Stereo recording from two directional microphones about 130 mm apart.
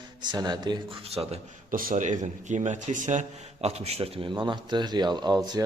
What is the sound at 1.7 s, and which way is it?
A man's voice, 80° right.